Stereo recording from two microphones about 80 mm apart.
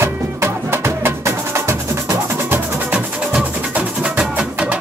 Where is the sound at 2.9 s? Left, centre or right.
Centre.